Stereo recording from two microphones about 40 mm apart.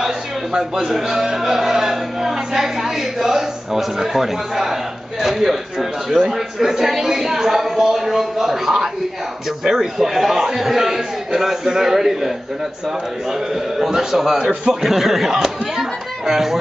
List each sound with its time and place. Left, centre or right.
0.0 s a sound: centre
0.9 s speech: centre
13.3 s a man's voice: centre